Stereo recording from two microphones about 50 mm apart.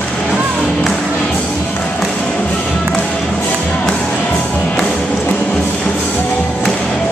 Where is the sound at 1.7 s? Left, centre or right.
Left.